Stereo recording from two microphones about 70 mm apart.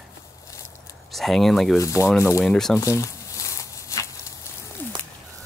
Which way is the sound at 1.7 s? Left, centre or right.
Left.